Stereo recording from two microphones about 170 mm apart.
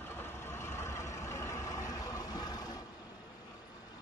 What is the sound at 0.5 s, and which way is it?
Vehicle, 15° left (ahead or behind).